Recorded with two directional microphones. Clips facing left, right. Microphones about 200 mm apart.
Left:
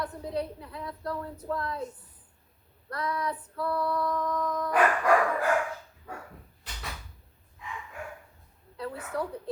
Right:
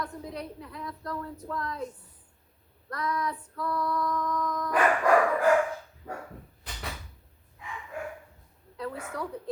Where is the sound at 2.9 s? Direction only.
30° left (ahead or behind).